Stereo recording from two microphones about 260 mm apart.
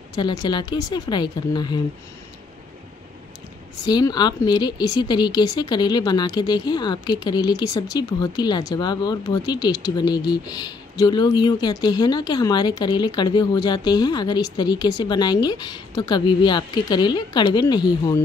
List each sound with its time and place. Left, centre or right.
0.1 s speech: centre
3.8 s speech: centre